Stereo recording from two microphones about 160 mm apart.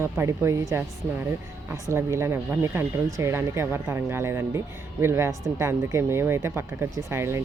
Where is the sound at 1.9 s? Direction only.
15° right (ahead or behind).